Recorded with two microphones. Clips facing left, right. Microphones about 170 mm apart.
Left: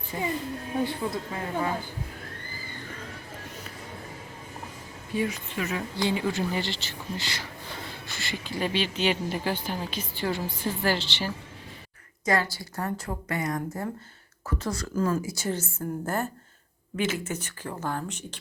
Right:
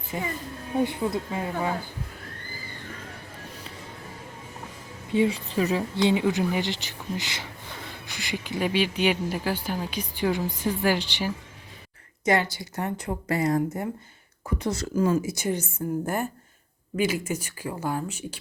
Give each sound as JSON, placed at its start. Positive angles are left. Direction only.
{"t": 0.1, "sound": "speech", "side_deg": -15}
{"t": 5.1, "sound": "speech", "side_deg": -25}
{"t": 5.5, "sound": "speech", "side_deg": -35}
{"t": 14.6, "sound": "speech", "side_deg": -25}